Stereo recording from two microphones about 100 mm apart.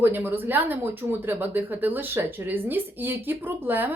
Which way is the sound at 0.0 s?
20° right (ahead or behind).